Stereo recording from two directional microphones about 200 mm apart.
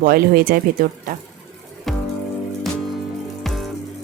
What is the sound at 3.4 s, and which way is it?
Music, centre (ahead or behind).